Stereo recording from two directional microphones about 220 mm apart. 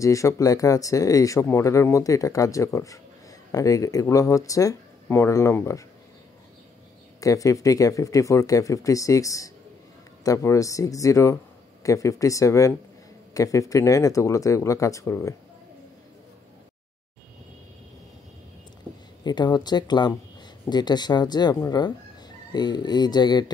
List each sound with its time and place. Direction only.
0.0 s speech: 15° left (ahead or behind)
7.2 s speech: 15° left (ahead or behind)
19.2 s speech: 20° left (ahead or behind)